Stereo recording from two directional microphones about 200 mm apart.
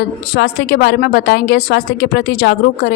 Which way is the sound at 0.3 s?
50° left (ahead or behind).